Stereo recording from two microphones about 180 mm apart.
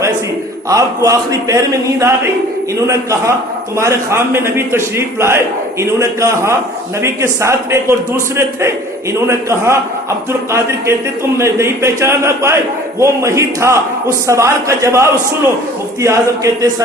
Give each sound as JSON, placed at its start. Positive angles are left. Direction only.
{"t": 0.7, "sound": "a man's voice", "side_deg": -20}